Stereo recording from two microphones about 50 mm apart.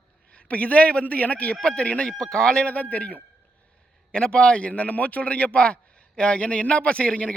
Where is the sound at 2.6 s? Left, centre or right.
Left.